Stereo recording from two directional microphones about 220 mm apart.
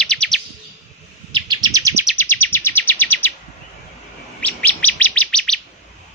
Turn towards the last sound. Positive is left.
turn(degrees=5)  # may be behind; listen again after turning